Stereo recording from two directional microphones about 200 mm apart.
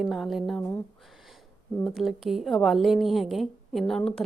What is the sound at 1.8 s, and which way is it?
A woman's voice, centre (ahead or behind).